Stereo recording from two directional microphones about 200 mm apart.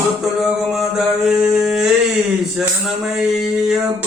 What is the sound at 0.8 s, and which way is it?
Mantra, 5° right (ahead or behind).